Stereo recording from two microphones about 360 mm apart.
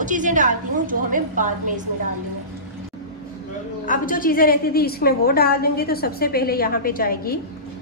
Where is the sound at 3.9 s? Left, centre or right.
Left.